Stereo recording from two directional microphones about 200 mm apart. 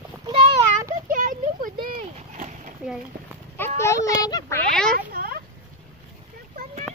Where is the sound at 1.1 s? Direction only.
40° right (ahead or behind).